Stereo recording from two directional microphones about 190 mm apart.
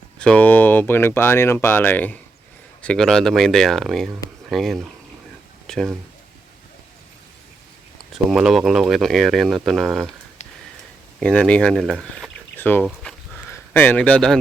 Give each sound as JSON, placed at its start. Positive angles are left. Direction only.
{"t": 0.2, "sound": "speech", "side_deg": 5}
{"t": 8.3, "sound": "speech", "side_deg": 0}
{"t": 11.2, "sound": "speech", "side_deg": 5}
{"t": 12.8, "sound": "a sound", "side_deg": 5}